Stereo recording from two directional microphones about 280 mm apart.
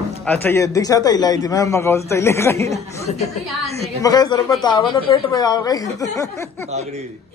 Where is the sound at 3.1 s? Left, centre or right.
Left.